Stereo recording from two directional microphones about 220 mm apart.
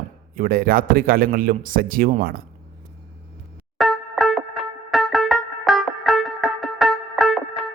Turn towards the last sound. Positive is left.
turn(degrees=0)  # may be behind; listen again after turning